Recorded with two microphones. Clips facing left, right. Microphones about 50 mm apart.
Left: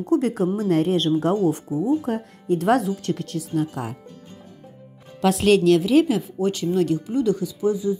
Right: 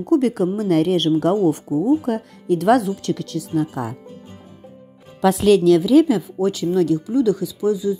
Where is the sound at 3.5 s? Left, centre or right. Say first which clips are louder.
Right 3 dB; centre.